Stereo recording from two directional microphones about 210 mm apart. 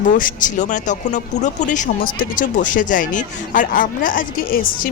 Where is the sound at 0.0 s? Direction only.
40° left (ahead or behind).